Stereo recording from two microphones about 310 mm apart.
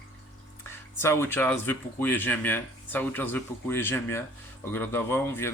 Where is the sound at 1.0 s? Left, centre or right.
Centre.